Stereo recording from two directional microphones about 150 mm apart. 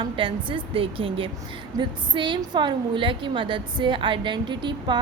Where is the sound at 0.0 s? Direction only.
35° right (ahead or behind).